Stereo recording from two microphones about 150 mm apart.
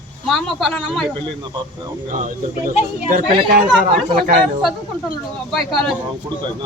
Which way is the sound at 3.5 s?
70° right (ahead or behind).